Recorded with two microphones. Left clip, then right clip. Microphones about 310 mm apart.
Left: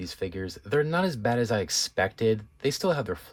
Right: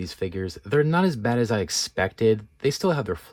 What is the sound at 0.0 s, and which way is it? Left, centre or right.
Speech, centre.